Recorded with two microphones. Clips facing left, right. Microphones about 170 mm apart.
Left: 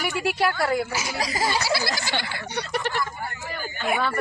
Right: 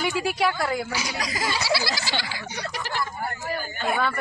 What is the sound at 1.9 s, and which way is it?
Speech, 55° left (ahead or behind).